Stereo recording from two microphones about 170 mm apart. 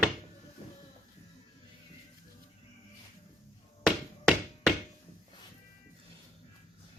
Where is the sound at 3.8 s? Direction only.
Centre (ahead or behind).